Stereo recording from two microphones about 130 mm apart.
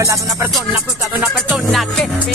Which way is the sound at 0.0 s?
25° right (ahead or behind).